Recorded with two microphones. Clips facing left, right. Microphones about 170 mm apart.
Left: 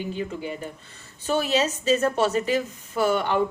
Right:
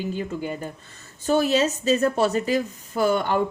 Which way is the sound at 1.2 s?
40° right (ahead or behind).